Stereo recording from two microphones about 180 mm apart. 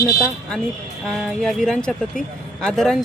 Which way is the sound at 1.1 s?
Centre (ahead or behind).